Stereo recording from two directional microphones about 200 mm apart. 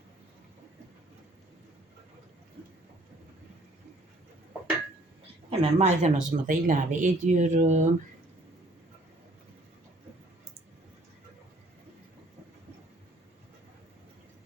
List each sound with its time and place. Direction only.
5.5 s speech: 35° right (ahead or behind)